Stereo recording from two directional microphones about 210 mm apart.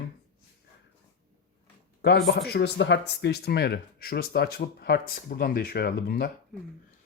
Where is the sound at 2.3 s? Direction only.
50° left (ahead or behind).